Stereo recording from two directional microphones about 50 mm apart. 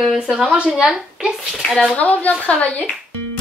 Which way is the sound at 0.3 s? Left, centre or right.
Centre.